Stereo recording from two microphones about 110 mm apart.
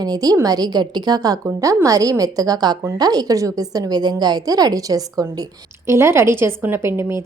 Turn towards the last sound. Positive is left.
turn(degrees=-20)  # may be behind; listen again after turning